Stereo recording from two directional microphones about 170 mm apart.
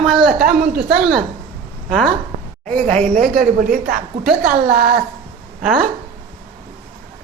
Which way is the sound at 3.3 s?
60° right (ahead or behind).